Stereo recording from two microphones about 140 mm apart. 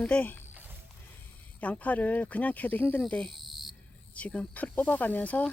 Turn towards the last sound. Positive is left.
turn(degrees=10)  # may be behind; listen again after turning